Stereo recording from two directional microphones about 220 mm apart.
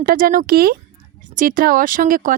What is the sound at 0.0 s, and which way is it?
Speech, 40° right (ahead or behind).